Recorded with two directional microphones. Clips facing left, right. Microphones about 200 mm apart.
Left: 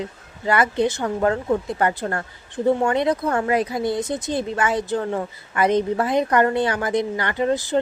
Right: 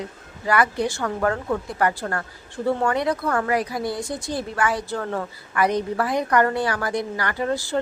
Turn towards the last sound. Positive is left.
turn(degrees=20)  # may be behind; listen again after turning